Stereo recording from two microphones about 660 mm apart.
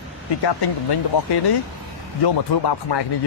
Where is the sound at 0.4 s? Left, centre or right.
Left.